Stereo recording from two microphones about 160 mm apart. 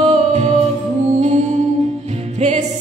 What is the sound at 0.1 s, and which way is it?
Music, 45° right (ahead or behind).